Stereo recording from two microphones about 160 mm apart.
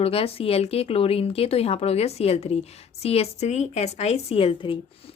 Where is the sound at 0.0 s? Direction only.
35° left (ahead or behind).